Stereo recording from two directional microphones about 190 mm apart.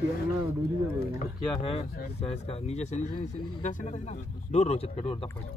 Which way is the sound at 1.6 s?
30° left (ahead or behind).